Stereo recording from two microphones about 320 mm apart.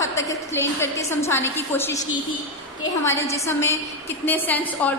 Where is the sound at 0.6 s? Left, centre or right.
Centre.